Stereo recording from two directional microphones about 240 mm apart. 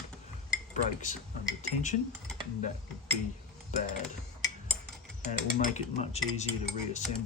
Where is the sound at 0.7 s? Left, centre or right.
Left.